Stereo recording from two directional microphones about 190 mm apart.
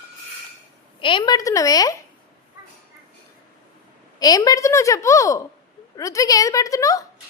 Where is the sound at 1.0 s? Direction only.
25° left (ahead or behind).